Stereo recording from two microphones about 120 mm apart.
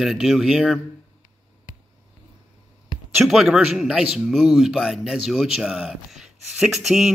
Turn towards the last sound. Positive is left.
turn(degrees=0)  # may be behind; listen again after turning